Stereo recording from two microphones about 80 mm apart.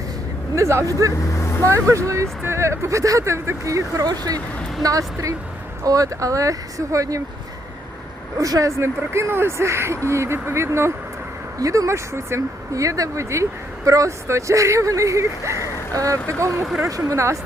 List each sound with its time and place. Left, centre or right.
0.5 s speech: right
1.3 s vehicle: left
1.6 s speech: right
8.4 s speech: right
8.8 s speech: right